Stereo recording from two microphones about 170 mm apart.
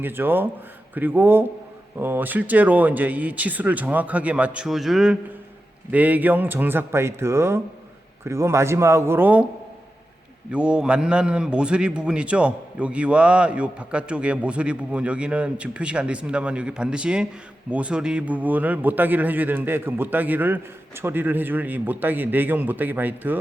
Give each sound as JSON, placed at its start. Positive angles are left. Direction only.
{"t": 0.0, "sound": "a man's voice", "side_deg": -10}
{"t": 10.5, "sound": "a man's voice", "side_deg": -5}